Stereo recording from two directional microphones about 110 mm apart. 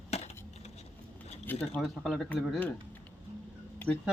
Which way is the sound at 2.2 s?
15° left (ahead or behind).